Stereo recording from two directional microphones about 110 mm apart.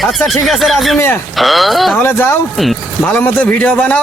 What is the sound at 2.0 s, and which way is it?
A man's voice, 20° left (ahead or behind).